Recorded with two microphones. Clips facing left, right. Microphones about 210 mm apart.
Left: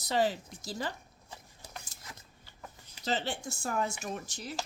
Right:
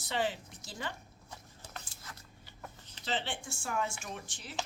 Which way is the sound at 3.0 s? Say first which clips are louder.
Left 4 dB; 40° left (ahead or behind).